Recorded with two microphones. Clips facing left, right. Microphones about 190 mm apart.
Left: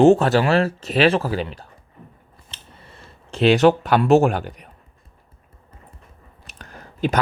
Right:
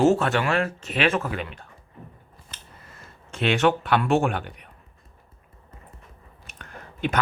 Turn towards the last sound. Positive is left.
turn(degrees=35)  # may be behind; listen again after turning